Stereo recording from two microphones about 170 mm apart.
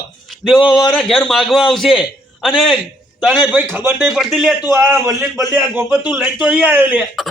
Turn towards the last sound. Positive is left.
turn(degrees=-5)  # may be behind; listen again after turning